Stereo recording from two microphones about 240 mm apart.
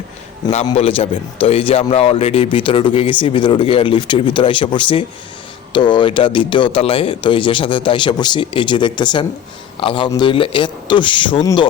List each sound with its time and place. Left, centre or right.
0.4 s a man's voice: left